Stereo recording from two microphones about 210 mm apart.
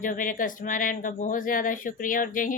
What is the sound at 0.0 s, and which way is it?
Speech, 40° left (ahead or behind).